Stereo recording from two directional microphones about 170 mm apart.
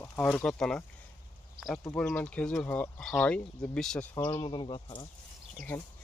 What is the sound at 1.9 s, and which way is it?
Speech, 10° left (ahead or behind).